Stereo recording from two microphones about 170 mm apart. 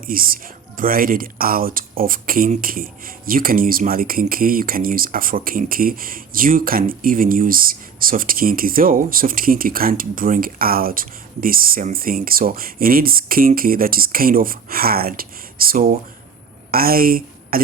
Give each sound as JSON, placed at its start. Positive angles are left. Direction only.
{"t": 0.0, "sound": "speech", "side_deg": -55}